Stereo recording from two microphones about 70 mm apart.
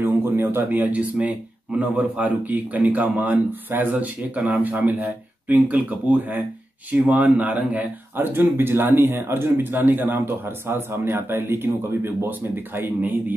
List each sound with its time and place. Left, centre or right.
0.0 s speech: right